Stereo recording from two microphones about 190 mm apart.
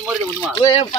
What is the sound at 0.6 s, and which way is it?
Speech, 30° left (ahead or behind).